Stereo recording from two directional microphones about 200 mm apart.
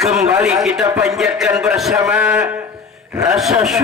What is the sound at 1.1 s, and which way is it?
A man's voice, centre (ahead or behind).